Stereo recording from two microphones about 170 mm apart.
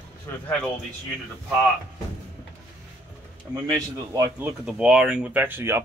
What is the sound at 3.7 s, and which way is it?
Speech, 15° right (ahead or behind).